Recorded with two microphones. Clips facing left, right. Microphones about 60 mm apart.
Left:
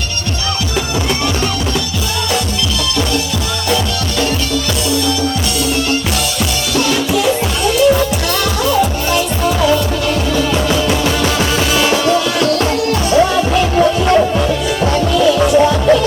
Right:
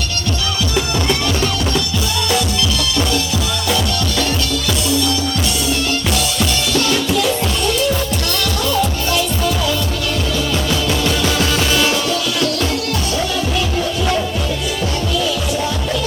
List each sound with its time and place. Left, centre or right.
6.7 s music: centre
8.7 s music: left
11.9 s music: left